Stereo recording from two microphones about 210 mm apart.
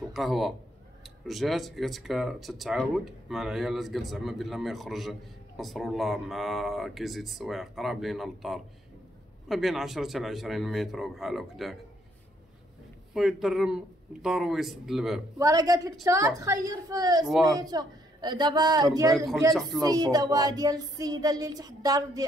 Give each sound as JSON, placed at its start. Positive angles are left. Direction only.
{"t": 0.1, "sound": "speech", "side_deg": 0}
{"t": 13.1, "sound": "speech", "side_deg": 0}
{"t": 15.3, "sound": "music", "side_deg": -15}
{"t": 17.3, "sound": "speech", "side_deg": 0}
{"t": 17.6, "sound": "speech", "side_deg": -20}
{"t": 19.1, "sound": "speech", "side_deg": 0}
{"t": 19.8, "sound": "music", "side_deg": -20}